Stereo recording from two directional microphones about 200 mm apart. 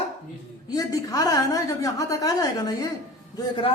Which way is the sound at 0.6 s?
20° left (ahead or behind).